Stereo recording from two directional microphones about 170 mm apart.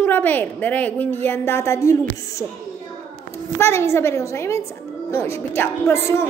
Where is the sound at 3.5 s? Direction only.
15° left (ahead or behind).